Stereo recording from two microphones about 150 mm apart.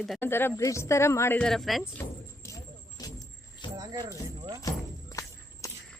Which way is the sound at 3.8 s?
25° right (ahead or behind).